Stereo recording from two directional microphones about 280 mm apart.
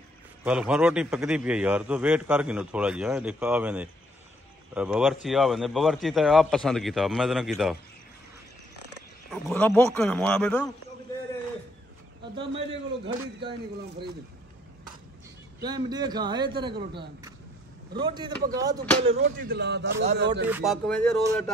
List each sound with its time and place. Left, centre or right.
0.4 s a man's voice: centre
9.3 s a man's voice: centre
12.4 s speech: right
13.4 s a man's voice: centre
15.6 s a man's voice: centre
17.9 s a man's voice: centre
19.0 s speech: right
20.4 s a man's voice: centre